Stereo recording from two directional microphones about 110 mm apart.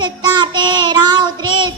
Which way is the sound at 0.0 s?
45° right (ahead or behind).